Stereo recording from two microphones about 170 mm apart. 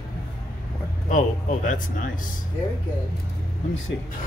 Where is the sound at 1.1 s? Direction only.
50° left (ahead or behind).